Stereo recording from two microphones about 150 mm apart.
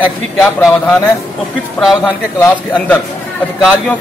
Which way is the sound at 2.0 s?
10° left (ahead or behind).